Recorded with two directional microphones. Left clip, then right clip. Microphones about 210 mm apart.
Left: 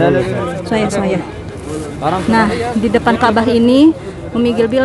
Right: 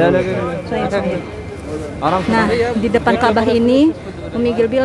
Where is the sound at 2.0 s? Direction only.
45° right (ahead or behind).